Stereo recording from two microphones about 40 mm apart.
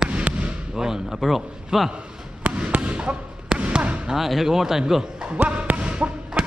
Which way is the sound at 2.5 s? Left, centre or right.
Right.